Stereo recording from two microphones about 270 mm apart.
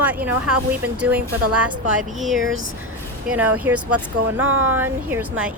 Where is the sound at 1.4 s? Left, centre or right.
Right.